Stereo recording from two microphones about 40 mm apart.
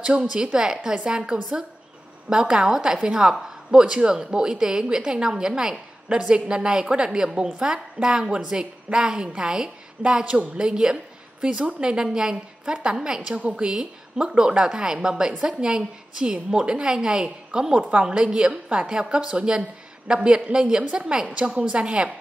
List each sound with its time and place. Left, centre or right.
0.0 s a woman's voice: right
17.7 s a woman's voice: right
18.1 s a woman's voice: centre
21.3 s a woman's voice: right